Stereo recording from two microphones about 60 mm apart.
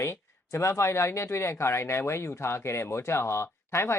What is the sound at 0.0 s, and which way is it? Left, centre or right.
Speech, left.